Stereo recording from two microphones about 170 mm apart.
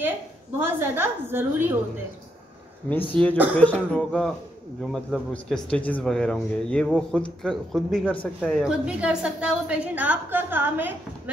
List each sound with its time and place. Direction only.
0.6 s a woman's voice: 15° right (ahead or behind)
2.9 s a woman's voice: 10° left (ahead or behind); by 10.9 s 10° right (ahead or behind)